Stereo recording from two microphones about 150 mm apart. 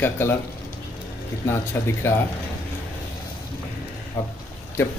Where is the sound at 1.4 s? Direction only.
15° left (ahead or behind).